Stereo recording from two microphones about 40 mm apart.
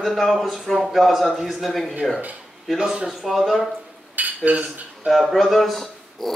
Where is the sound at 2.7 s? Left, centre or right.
Centre.